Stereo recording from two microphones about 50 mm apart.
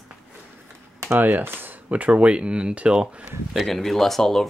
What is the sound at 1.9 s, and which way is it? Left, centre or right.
Speech, right.